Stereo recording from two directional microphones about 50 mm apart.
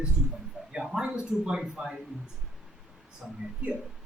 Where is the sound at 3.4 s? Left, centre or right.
Right.